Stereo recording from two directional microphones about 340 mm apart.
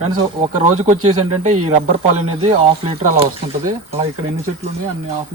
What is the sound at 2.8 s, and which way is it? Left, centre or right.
Speech, centre.